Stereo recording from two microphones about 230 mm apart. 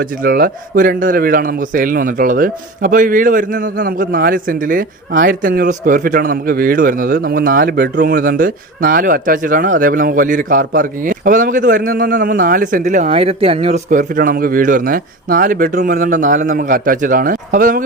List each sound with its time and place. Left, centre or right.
0.2 s a man's voice: right